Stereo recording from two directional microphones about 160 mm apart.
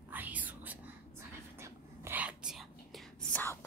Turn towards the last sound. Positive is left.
turn(degrees=5)  # may be behind; listen again after turning